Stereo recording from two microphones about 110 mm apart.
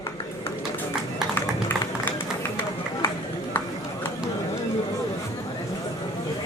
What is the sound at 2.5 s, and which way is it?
Run, 25° left (ahead or behind).